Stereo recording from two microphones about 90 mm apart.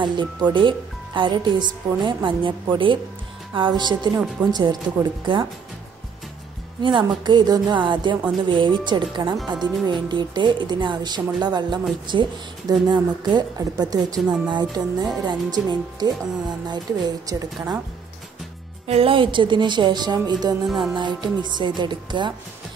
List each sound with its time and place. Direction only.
0.0 s speech: 55° right (ahead or behind)
6.8 s a woman's voice: 65° right (ahead or behind)
18.9 s speech: 80° right; by 20.5 s 50° right (ahead or behind)
20.6 s music: centre (ahead or behind)
20.9 s speech: 60° right (ahead or behind)